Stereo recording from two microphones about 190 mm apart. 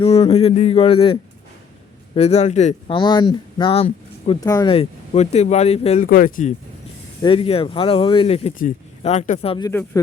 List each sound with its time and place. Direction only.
0.0 s speech: 30° left (ahead or behind)
4.4 s speech: 20° left (ahead or behind)
4.7 s speech: 35° left (ahead or behind)
6.1 s speech: 45° left (ahead or behind)
7.2 s speech: 25° left (ahead or behind)
9.6 s speech: 15° left (ahead or behind)